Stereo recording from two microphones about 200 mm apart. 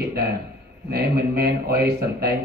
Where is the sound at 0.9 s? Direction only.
50° right (ahead or behind).